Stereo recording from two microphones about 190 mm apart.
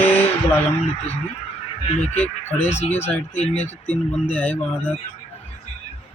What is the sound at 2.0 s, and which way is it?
Speech, 10° left (ahead or behind).